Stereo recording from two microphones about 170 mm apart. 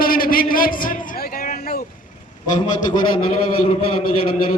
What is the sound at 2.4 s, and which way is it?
A man's voice, 25° left (ahead or behind).